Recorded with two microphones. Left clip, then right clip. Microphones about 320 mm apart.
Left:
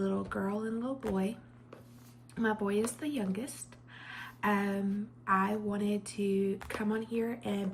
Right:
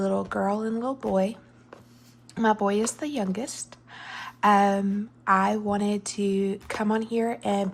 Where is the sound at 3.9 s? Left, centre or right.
Centre.